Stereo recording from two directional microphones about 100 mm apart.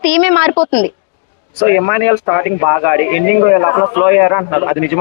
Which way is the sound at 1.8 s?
25° left (ahead or behind).